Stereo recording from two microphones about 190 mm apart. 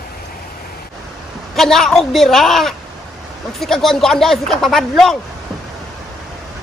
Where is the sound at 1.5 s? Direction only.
Centre (ahead or behind).